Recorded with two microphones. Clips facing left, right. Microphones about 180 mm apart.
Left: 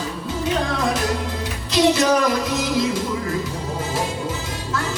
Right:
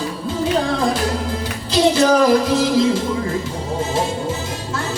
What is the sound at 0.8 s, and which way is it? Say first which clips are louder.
Music: right 2 dB; 30° right (ahead or behind).